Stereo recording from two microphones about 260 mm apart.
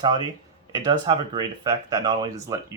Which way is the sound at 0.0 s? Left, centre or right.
Centre.